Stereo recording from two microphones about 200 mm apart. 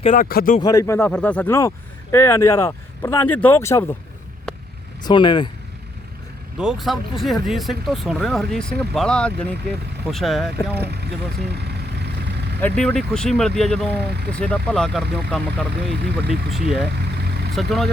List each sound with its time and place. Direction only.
0.0 s speech: 40° left (ahead or behind)
0.6 s speech: 15° left (ahead or behind)
5.0 s speech: 20° left (ahead or behind)
6.6 s speech: centre (ahead or behind)
10.8 s speech: 55° right (ahead or behind)
12.5 s speech: 5° left (ahead or behind)